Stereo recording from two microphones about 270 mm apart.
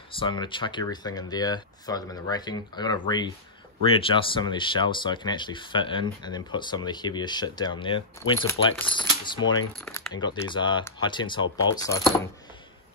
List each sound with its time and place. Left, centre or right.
0.1 s speech: centre